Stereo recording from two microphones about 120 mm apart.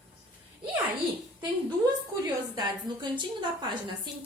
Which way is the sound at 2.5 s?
40° right (ahead or behind).